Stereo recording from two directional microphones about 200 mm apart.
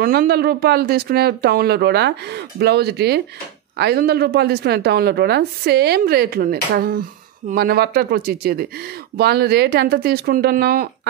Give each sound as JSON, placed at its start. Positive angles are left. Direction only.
{"t": 0.0, "sound": "a woman's voice", "side_deg": -50}